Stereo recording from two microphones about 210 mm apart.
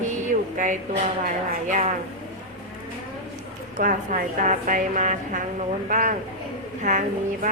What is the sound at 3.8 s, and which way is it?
A woman's voice, 40° right (ahead or behind).